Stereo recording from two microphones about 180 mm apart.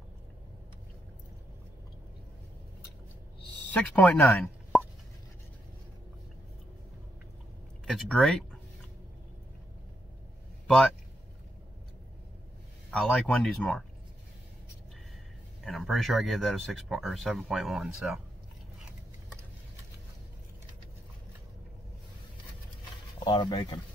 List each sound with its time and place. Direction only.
3.7 s speech: 10° left (ahead or behind)
4.7 s plop: centre (ahead or behind)
7.8 s a sound: centre (ahead or behind)
10.7 s speech: 5° left (ahead or behind)
12.9 s speech: 5° left (ahead or behind)
15.6 s speech: centre (ahead or behind)
23.2 s speech: 30° left (ahead or behind)